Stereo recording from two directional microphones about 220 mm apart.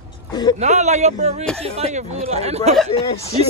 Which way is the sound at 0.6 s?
30° right (ahead or behind).